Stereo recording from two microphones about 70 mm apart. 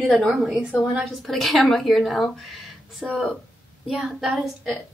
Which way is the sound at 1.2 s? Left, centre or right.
Centre.